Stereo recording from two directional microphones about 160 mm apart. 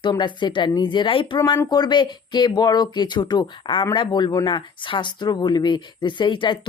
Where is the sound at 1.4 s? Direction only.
20° left (ahead or behind).